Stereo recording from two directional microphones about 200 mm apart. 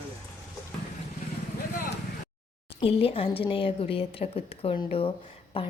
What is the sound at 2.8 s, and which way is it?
A woman's voice, 30° left (ahead or behind).